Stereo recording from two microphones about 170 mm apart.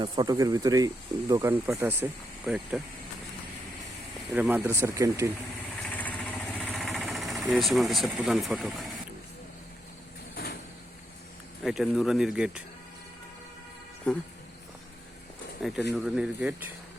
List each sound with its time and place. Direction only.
0.0 s speech: 25° right (ahead or behind); by 2.9 s 5° right (ahead or behind)
4.3 s speech: 10° right (ahead or behind)
5.8 s vehicle: 10° left (ahead or behind)
6.6 s engine: centre (ahead or behind)
10.3 s sliding door: 70° left (ahead or behind)
11.6 s speech: centre (ahead or behind)
14.1 s speech: 5° left (ahead or behind)
15.6 s speech: centre (ahead or behind)